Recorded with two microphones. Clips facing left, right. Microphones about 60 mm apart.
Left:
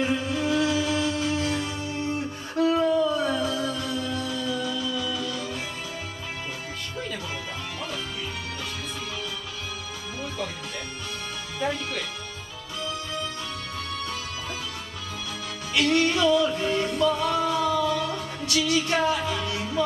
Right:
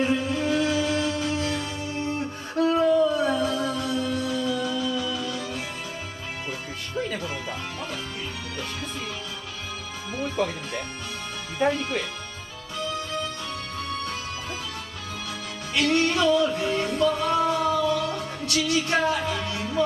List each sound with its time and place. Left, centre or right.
0.0 s music: right
2.6 s music: right
10.1 s music: right
11.6 s music: right
15.7 s music: right